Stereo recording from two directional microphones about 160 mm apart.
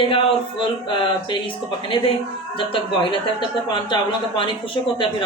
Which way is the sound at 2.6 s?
35° left (ahead or behind).